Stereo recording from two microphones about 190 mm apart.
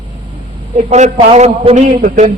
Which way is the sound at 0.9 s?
30° right (ahead or behind).